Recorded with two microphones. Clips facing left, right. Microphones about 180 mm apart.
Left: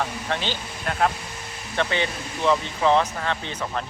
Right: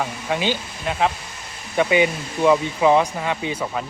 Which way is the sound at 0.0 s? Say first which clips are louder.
Right 4 dB; 10° right (ahead or behind).